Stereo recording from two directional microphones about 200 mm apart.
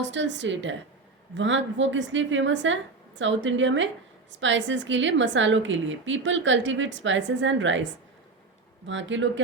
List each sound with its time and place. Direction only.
0.0 s a woman's voice: 65° right (ahead or behind)
8.9 s a woman's voice: 70° right (ahead or behind)